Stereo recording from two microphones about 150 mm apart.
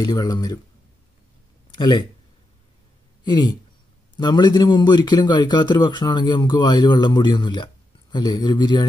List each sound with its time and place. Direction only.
0.0 s a man's voice: 25° left (ahead or behind)
1.7 s speech: 30° left (ahead or behind)
3.3 s a man's voice: 30° left (ahead or behind)